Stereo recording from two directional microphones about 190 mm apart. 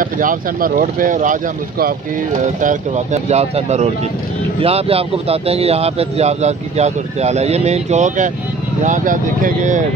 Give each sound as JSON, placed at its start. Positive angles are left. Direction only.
{"t": 0.0, "sound": "a man's voice", "side_deg": -45}